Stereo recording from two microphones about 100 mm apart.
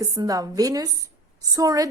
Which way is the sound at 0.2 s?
35° right (ahead or behind).